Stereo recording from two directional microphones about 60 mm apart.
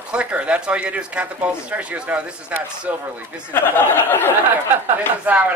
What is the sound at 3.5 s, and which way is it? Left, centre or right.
Speech, left.